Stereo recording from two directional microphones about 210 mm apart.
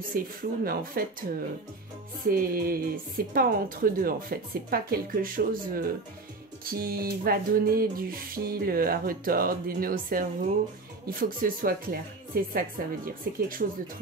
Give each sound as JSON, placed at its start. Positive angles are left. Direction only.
{"t": 0.1, "sound": "music", "side_deg": -45}
{"t": 2.2, "sound": "music", "side_deg": -45}